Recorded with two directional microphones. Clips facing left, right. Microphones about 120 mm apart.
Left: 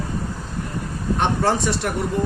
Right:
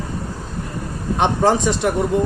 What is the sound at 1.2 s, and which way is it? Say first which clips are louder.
Speech: right 4 dB; 15° right (ahead or behind).